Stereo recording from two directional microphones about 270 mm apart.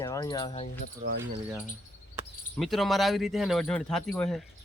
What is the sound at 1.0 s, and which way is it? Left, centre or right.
Speech, right.